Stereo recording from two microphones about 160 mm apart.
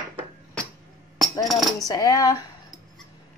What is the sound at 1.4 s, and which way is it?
Speech, centre (ahead or behind).